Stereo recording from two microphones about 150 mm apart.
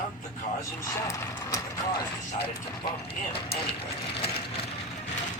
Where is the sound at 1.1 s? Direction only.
20° left (ahead or behind).